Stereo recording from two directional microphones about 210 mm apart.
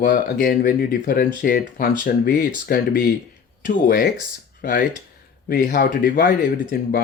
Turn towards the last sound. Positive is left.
turn(degrees=45)  # may be behind; listen again after turning